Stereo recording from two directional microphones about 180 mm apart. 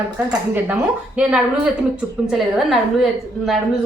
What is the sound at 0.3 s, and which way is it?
A woman's voice, 5° right (ahead or behind).